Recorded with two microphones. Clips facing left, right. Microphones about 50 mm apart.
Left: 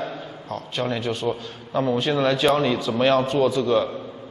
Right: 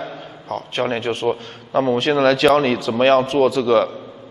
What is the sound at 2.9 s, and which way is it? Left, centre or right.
A man's voice, right.